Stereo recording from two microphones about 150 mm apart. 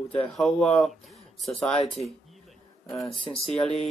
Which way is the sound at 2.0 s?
50° left (ahead or behind).